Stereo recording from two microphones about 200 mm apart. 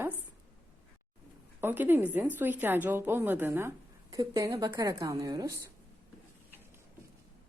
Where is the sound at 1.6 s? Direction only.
10° right (ahead or behind).